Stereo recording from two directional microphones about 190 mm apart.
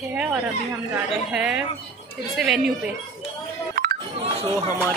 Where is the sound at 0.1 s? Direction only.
5° right (ahead or behind).